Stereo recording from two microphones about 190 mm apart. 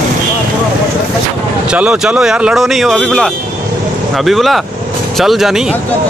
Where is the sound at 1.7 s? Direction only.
5° right (ahead or behind).